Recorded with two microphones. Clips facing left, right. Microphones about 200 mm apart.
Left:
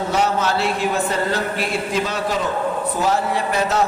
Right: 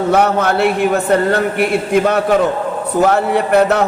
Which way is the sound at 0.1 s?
60° right (ahead or behind).